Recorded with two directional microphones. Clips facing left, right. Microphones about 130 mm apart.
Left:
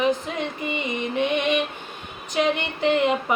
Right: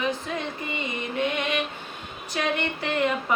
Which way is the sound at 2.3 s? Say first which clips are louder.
Left 4 dB; 20° left (ahead or behind).